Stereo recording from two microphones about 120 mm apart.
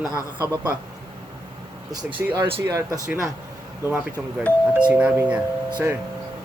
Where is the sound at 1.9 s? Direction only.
40° right (ahead or behind).